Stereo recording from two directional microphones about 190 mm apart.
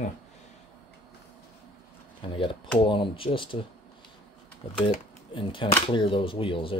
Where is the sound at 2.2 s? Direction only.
25° left (ahead or behind).